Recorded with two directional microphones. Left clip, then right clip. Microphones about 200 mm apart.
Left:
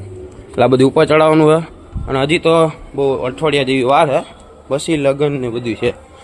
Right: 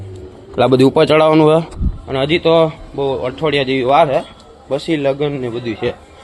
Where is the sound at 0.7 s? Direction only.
10° right (ahead or behind).